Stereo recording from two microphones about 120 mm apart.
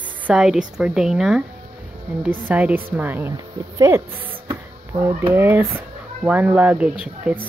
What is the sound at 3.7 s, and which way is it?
Speech, 30° right (ahead or behind).